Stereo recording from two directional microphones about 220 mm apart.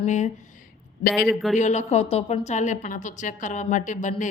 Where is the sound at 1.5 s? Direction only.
30° left (ahead or behind).